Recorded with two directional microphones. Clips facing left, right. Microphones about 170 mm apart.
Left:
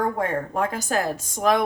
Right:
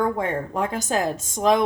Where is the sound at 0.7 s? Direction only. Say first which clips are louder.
Right 1 dB; 20° right (ahead or behind).